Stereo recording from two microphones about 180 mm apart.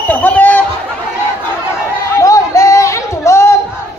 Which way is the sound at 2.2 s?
20° left (ahead or behind).